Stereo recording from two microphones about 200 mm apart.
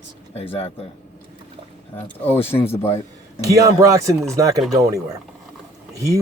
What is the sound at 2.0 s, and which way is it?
Speech, 10° left (ahead or behind).